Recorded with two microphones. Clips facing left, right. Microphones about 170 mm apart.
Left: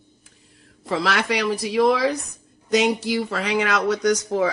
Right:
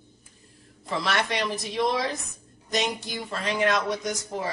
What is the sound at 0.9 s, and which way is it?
Speech, 80° left.